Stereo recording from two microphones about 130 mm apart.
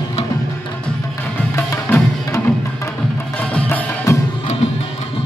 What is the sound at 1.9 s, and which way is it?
Music, 15° left (ahead or behind).